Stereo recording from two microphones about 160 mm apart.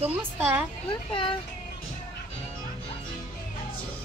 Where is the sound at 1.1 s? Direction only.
30° left (ahead or behind).